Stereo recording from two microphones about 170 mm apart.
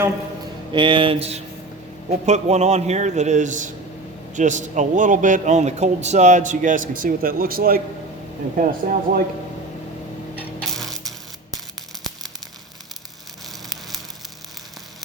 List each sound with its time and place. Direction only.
0.7 s mantra: 30° right (ahead or behind)
2.0 s speech: 40° right (ahead or behind)
10.3 s tick-tock: centre (ahead or behind)